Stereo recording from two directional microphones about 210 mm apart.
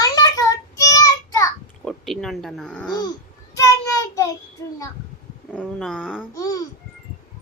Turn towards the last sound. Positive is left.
turn(degrees=15)  # may be behind; listen again after turning